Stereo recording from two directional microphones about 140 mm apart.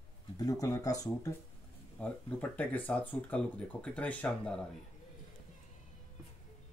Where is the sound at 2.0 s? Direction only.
10° left (ahead or behind).